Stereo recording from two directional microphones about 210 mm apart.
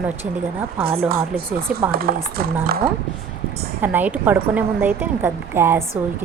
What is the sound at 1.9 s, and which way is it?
Chopping, 45° right (ahead or behind).